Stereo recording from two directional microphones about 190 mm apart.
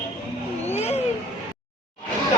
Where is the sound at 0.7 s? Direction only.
35° left (ahead or behind).